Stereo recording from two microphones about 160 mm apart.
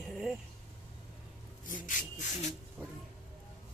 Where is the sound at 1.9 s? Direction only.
55° left (ahead or behind).